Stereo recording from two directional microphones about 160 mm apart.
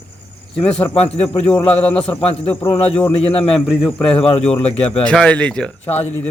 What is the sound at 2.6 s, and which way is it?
Speech, 35° left (ahead or behind).